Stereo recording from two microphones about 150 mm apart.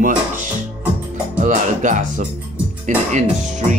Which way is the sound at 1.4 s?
60° right (ahead or behind).